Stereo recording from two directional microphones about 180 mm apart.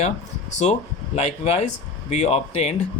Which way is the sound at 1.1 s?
35° left (ahead or behind).